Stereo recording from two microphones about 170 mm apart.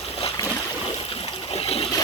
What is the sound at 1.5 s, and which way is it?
Water, 35° left (ahead or behind).